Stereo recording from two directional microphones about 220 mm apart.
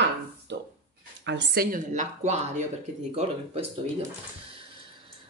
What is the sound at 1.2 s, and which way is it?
Speech, 55° right (ahead or behind).